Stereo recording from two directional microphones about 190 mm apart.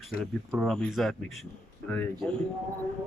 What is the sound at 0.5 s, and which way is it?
Speech, centre (ahead or behind).